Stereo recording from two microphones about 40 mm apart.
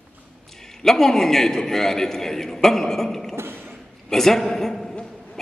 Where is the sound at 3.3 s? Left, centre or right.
Right.